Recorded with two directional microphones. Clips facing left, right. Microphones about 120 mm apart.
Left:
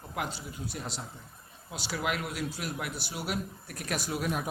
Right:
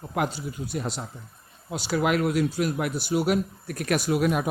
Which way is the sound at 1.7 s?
55° right (ahead or behind).